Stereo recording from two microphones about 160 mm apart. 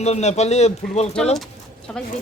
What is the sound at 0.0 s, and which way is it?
A man's voice, 45° left (ahead or behind).